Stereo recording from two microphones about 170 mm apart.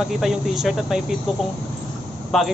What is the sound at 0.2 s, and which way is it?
Speech, centre (ahead or behind).